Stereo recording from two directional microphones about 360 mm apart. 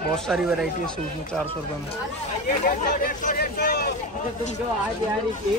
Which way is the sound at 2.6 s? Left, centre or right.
Left.